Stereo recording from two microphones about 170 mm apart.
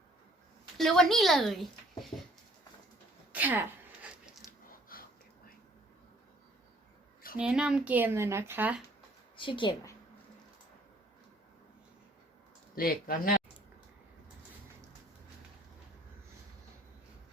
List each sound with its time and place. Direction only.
0.8 s a woman's voice: centre (ahead or behind)
2.1 s a sound: 25° left (ahead or behind)
3.3 s a sound: 10° right (ahead or behind)
7.3 s speech: 5° right (ahead or behind)
9.3 s a woman's voice: 30° left (ahead or behind)
12.7 s speech: 60° left (ahead or behind)